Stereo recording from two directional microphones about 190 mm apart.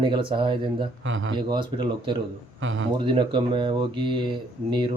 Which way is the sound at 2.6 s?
90° right.